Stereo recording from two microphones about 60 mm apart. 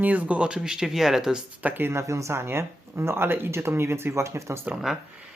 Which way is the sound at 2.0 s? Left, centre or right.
Right.